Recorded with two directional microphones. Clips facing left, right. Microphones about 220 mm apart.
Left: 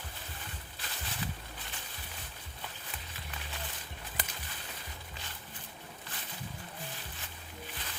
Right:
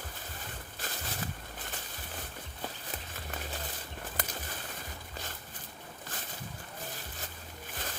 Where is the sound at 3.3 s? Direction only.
45° right (ahead or behind).